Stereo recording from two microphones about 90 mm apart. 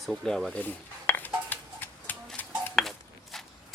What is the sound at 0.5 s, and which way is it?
Dishes, 20° left (ahead or behind).